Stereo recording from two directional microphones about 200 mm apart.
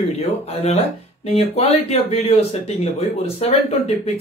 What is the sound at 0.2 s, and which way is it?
Speech, 30° left (ahead or behind).